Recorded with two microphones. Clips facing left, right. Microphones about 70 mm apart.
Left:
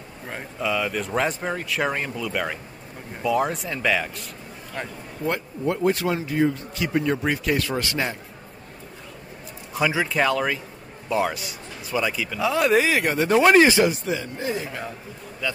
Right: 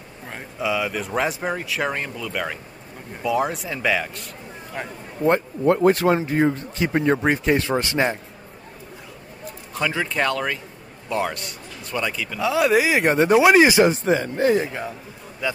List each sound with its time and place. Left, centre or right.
0.3 s speech: centre
5.7 s speech: right
9.8 s speech: centre
12.9 s speech: right
13.3 s speech: centre
13.8 s speech: right
15.4 s speech: centre